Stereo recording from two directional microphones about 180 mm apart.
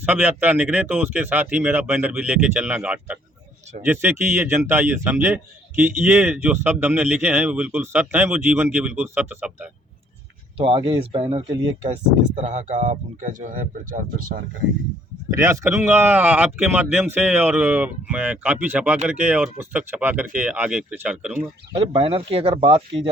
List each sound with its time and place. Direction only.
0.0 s a man's voice: 10° right (ahead or behind)
10.6 s speech: 30° right (ahead or behind); by 14.4 s 50° right (ahead or behind)
15.3 s a man's voice: 15° right (ahead or behind)
21.8 s speech: 30° right (ahead or behind)